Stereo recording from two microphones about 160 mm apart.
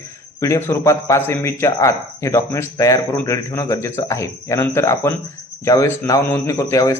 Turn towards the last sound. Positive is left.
turn(degrees=20)  # may be behind; listen again after turning